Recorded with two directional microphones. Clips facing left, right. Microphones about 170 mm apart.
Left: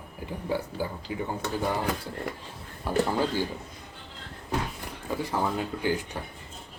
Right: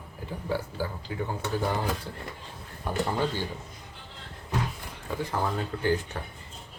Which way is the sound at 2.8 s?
5° left (ahead or behind).